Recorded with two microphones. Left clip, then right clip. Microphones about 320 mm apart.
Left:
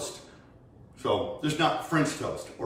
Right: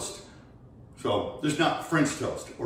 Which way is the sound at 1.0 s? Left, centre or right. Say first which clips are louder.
Even; centre.